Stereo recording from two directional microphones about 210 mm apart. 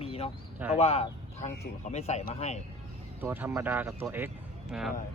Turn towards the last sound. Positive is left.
turn(degrees=0)  # may be behind; listen again after turning